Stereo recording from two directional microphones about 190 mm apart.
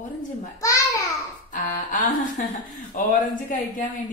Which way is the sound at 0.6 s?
15° left (ahead or behind).